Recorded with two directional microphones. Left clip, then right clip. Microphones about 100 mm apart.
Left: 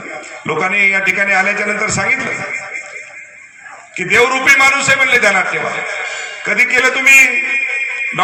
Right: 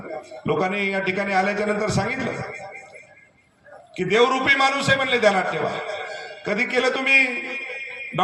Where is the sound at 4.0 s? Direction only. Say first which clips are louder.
Left 7 dB; 20° right (ahead or behind).